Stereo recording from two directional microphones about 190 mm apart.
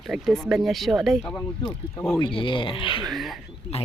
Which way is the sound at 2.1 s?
25° left (ahead or behind).